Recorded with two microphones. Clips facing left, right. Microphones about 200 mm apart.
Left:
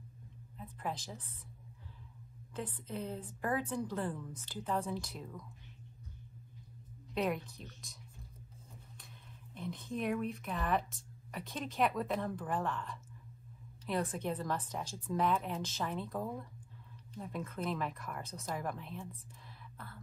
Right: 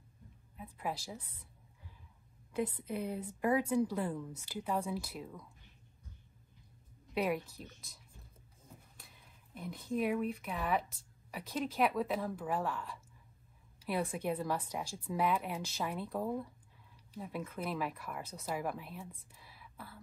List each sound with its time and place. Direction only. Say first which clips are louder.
0.6 s a woman's voice: right 1 dB; 10° right (ahead or behind)
2.5 s a woman's voice: right 5 dB; 10° right (ahead or behind)
7.2 s a woman's voice: right 1 dB; 5° right (ahead or behind)